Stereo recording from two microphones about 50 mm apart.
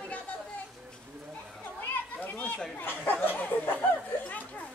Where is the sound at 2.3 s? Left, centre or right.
Left.